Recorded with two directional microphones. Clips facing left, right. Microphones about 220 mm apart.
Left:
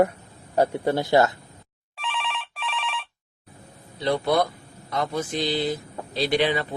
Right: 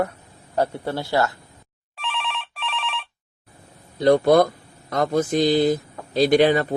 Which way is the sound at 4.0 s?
45° right (ahead or behind).